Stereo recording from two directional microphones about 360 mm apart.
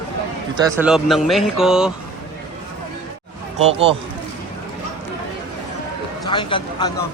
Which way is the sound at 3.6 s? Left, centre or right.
Centre.